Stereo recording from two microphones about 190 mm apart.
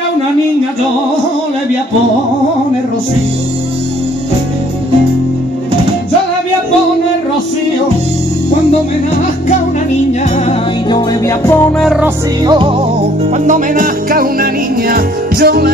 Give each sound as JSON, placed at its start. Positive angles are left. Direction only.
{"t": 10.9, "sound": "music", "side_deg": 15}
{"t": 11.8, "sound": "music", "side_deg": 0}
{"t": 12.4, "sound": "music", "side_deg": -25}
{"t": 13.5, "sound": "music", "side_deg": -50}